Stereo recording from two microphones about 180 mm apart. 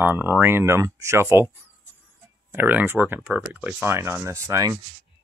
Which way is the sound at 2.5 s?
10° right (ahead or behind).